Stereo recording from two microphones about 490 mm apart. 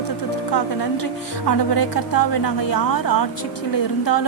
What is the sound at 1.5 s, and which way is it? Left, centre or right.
A woman's voice, left.